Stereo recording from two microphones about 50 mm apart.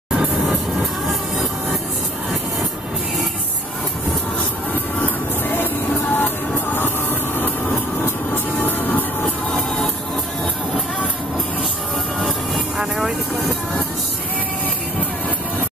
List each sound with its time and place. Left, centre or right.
1.0 s train: centre
4.9 s music: left
8.5 s train: left
9.5 s music: centre
12.5 s vehicle: centre